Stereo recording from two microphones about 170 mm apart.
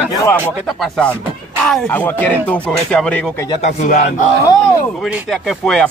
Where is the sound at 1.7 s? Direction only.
10° left (ahead or behind).